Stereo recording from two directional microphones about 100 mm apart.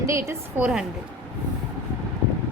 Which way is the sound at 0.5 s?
10° right (ahead or behind).